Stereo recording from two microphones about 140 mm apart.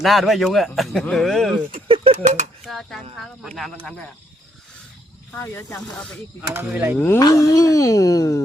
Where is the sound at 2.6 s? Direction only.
Centre (ahead or behind).